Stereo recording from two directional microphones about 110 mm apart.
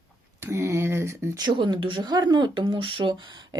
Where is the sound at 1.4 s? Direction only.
45° right (ahead or behind).